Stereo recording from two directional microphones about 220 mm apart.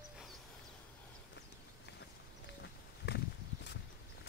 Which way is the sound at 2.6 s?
50° left (ahead or behind).